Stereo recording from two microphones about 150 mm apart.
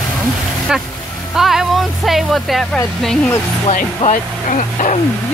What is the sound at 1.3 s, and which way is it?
Speech, centre (ahead or behind).